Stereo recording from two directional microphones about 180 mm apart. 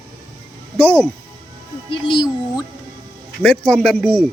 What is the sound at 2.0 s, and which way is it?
Music, 25° left (ahead or behind).